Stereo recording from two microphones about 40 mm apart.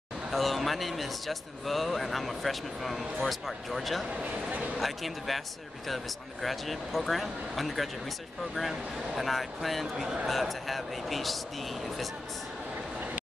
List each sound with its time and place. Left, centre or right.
0.3 s speech: centre
4.2 s speech: right
4.7 s speech: centre